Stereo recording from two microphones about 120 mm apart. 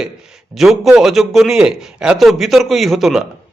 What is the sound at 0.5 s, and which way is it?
A man's voice, 5° right (ahead or behind).